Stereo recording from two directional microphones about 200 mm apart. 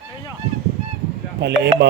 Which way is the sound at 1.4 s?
60° right (ahead or behind).